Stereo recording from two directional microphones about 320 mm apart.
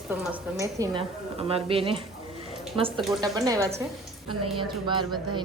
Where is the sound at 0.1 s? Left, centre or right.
Centre.